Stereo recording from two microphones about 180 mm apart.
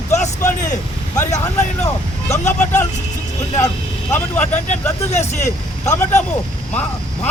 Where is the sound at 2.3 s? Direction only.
40° left (ahead or behind).